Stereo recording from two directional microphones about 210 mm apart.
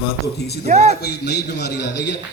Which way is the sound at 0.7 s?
35° right (ahead or behind).